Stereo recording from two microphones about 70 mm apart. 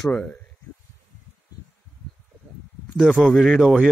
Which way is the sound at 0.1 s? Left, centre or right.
Centre.